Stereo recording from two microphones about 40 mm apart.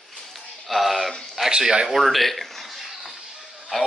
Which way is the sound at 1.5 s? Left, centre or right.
Right.